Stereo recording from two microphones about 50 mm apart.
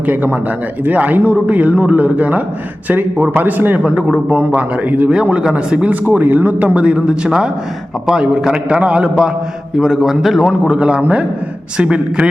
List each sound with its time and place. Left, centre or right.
0.0 s a man's voice: right
3.9 s a man's voice: right
5.1 s speech: centre
6.1 s a man's voice: right; by 10.5 s centre
10.7 s speech: centre